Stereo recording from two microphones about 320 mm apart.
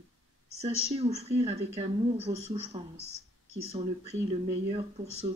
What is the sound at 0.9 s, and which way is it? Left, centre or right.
Speech, centre.